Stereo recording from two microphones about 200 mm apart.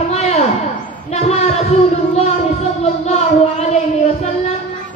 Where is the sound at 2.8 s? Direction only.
30° left (ahead or behind).